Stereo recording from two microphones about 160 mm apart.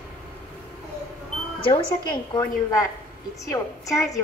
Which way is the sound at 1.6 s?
30° left (ahead or behind).